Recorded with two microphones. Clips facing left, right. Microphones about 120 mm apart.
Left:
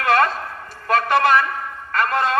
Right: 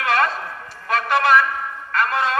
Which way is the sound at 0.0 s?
45° left (ahead or behind).